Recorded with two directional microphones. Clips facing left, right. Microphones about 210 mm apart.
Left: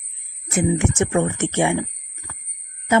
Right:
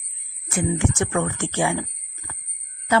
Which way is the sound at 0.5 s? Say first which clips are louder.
Left 3 dB; 20° left (ahead or behind).